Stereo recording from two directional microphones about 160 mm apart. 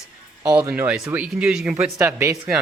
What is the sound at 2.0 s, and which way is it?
Speech, 20° right (ahead or behind).